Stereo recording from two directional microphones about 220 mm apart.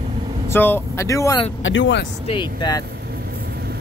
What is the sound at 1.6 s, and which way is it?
Speech, 55° left (ahead or behind).